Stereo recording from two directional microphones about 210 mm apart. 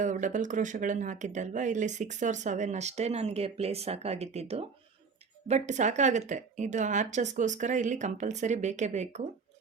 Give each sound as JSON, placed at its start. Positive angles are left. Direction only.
{"t": 0.0, "sound": "speech", "side_deg": -35}